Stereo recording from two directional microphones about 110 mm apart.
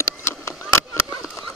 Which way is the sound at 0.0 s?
25° left (ahead or behind).